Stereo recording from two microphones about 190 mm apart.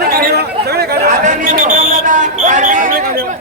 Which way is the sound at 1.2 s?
40° right (ahead or behind).